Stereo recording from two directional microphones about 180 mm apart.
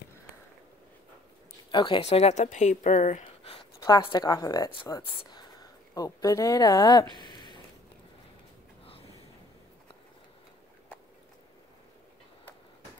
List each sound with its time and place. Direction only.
1.7 s speech: 25° left (ahead or behind); by 3.3 s 45° left (ahead or behind)
3.8 s speech: 25° left (ahead or behind)